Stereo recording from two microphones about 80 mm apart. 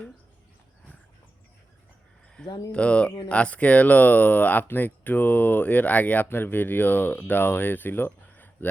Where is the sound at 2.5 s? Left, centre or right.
Left.